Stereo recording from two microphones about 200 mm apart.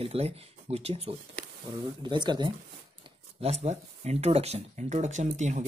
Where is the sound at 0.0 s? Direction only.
30° right (ahead or behind).